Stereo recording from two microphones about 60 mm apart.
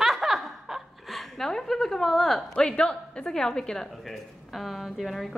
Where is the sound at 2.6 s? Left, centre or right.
Centre.